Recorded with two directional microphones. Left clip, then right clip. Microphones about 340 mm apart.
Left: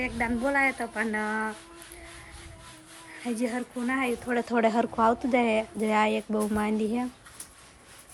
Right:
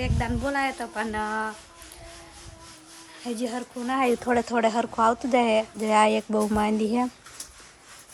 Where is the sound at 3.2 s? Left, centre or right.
Centre.